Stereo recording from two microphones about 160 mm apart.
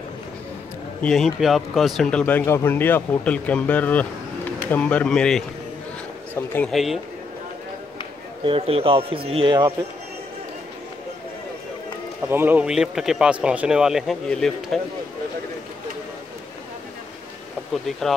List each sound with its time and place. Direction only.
1.0 s speech: centre (ahead or behind)
6.7 s speech: centre (ahead or behind)
8.5 s a man's voice: 35° right (ahead or behind)
12.2 s speech: 15° right (ahead or behind); by 14.8 s 5° left (ahead or behind)